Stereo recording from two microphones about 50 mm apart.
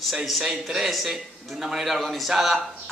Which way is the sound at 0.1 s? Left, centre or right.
Centre.